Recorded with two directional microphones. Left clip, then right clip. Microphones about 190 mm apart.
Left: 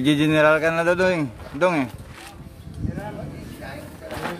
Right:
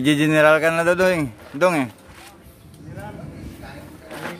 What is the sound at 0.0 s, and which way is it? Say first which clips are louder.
Speech: right 2 dB; 25° right (ahead or behind).